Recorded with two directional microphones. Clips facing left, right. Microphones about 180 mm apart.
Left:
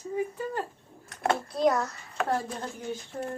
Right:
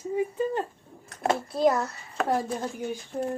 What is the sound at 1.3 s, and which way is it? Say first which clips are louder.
A child's voice: right 2 dB; 5° right (ahead or behind).